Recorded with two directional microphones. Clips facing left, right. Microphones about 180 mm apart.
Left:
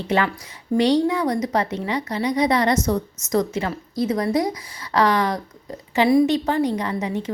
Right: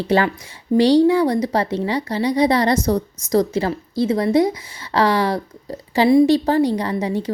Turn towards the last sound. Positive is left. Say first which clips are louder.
# right 3 dB
turn(degrees=-35)  # may be behind; listen again after turning